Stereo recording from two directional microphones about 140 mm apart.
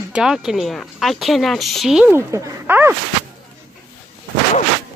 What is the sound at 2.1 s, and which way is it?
Speech, 20° right (ahead or behind).